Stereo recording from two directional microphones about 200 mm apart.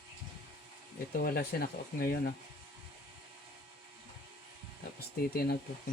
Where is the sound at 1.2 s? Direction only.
50° left (ahead or behind).